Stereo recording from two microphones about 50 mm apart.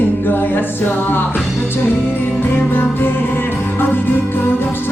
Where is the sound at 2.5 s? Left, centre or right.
Left.